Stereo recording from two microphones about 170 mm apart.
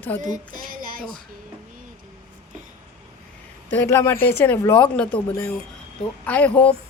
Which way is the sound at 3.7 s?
15° left (ahead or behind).